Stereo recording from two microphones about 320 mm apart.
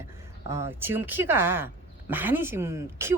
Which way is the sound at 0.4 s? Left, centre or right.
Centre.